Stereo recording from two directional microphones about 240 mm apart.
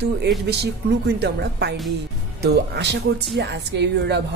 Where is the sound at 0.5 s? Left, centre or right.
Right.